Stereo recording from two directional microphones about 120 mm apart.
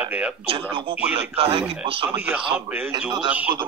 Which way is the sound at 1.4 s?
50° right (ahead or behind).